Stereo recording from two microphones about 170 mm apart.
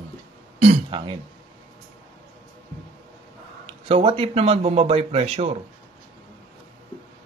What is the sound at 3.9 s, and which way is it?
Speech, 30° right (ahead or behind).